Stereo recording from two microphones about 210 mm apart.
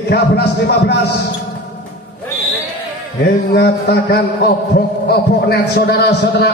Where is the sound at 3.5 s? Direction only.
55° left (ahead or behind).